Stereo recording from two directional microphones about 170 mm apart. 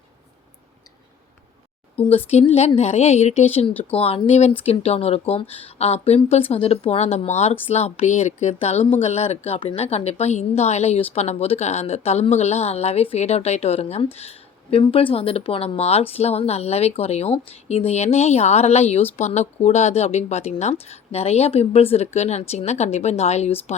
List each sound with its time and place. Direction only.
2.0 s a woman's voice: 35° left (ahead or behind)
3.7 s speech: 10° left (ahead or behind)
3.9 s a woman's voice: 35° left (ahead or behind)